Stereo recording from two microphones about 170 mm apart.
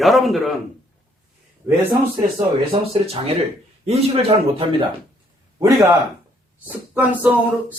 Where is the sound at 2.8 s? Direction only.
35° right (ahead or behind).